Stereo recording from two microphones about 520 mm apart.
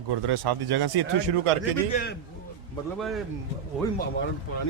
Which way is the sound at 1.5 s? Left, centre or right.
Right.